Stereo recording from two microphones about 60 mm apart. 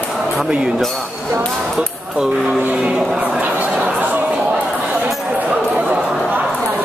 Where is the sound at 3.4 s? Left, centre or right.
Right.